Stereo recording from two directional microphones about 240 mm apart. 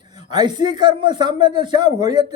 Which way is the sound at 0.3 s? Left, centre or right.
Centre.